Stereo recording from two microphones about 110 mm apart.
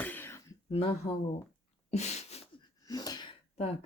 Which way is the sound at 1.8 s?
90° left.